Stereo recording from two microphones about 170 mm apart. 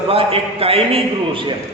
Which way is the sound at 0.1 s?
35° right (ahead or behind).